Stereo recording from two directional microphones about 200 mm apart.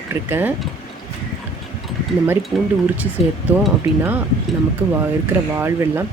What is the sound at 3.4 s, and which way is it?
Speech, 10° right (ahead or behind).